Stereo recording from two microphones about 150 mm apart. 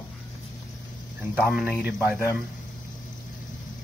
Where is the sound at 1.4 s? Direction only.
5° right (ahead or behind).